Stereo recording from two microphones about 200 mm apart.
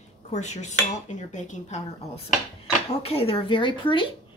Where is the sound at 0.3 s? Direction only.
35° left (ahead or behind).